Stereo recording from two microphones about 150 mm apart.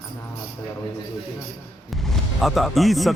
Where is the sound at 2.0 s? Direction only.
Centre (ahead or behind).